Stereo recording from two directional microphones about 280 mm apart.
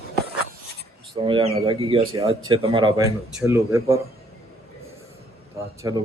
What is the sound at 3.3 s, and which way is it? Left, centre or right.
Speech, centre.